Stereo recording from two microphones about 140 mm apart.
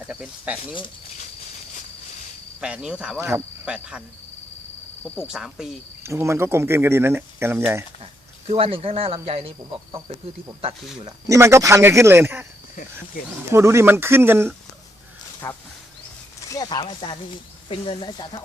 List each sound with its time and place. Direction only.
0.1 s speech: 10° right (ahead or behind)
2.6 s speech: 5° right (ahead or behind)
3.2 s speech: 15° right (ahead or behind)
5.3 s cricket: 5° right (ahead or behind)
6.0 s speech: 20° right (ahead or behind)
8.4 s speech: 45° right (ahead or behind)
11.0 s speech: 20° right (ahead or behind)
13.5 s speech: 20° right (ahead or behind)
15.4 s speech: 20° left (ahead or behind)